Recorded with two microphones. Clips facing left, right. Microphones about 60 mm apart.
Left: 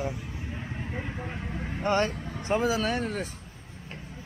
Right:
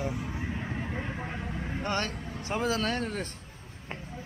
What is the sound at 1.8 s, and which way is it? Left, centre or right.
Speech, left.